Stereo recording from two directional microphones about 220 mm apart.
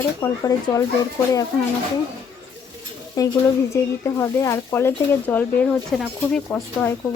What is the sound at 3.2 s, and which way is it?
Speech, 15° left (ahead or behind).